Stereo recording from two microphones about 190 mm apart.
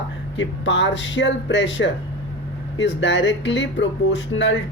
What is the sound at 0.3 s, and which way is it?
Speech, 70° left (ahead or behind).